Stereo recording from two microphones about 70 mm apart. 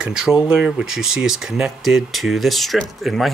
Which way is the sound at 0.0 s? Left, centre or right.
Centre.